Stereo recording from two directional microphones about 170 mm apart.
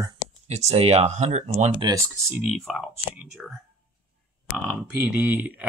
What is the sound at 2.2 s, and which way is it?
Speech, 5° right (ahead or behind).